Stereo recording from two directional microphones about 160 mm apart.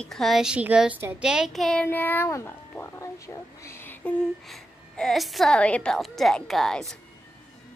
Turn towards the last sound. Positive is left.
turn(degrees=0)  # may be behind; listen again after turning